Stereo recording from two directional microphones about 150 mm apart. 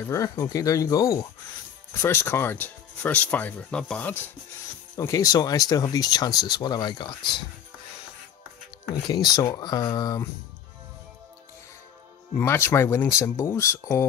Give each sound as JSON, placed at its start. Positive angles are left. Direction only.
{"t": 0.1, "sound": "speech", "side_deg": 20}
{"t": 4.9, "sound": "speech", "side_deg": 20}
{"t": 9.0, "sound": "speech", "side_deg": 25}
{"t": 12.4, "sound": "speech", "side_deg": 15}